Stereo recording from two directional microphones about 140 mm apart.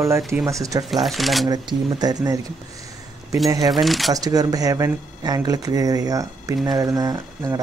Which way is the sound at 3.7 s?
Centre (ahead or behind).